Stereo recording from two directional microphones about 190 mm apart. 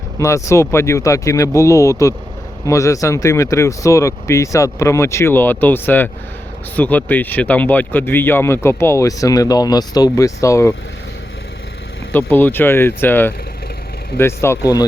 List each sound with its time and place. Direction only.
0.2 s speech: 15° left (ahead or behind)
12.1 s speech: 10° left (ahead or behind)